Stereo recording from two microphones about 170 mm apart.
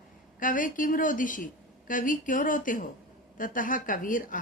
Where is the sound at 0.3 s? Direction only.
50° left (ahead or behind).